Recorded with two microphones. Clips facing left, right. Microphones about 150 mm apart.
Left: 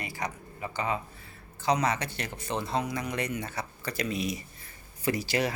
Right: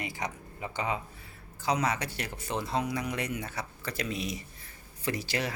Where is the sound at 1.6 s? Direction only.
5° right (ahead or behind).